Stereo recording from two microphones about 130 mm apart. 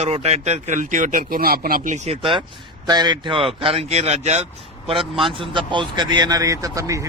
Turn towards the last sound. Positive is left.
turn(degrees=-25)  # may be behind; listen again after turning